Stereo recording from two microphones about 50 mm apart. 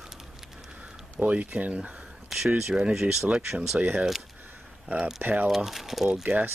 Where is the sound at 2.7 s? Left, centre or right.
Centre.